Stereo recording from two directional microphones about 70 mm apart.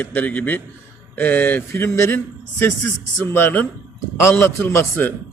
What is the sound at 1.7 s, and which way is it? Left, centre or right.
Speech, left.